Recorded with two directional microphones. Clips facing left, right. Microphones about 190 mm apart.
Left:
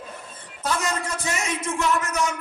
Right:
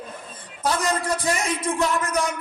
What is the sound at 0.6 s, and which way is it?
Music, 35° right (ahead or behind).